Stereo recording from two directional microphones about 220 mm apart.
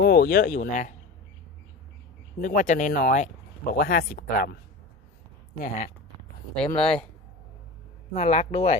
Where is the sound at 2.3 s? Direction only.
35° left (ahead or behind).